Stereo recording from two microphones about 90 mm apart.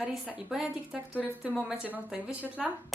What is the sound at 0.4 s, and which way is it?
Speech, 5° right (ahead or behind).